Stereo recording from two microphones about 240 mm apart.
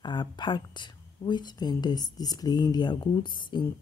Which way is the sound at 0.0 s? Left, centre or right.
Centre.